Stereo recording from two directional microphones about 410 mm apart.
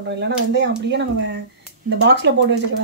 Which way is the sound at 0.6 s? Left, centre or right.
Right.